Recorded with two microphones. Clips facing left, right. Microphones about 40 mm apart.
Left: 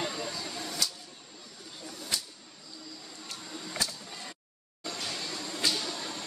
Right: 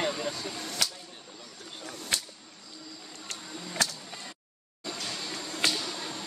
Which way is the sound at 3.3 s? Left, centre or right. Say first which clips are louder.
Right 1 dB; right.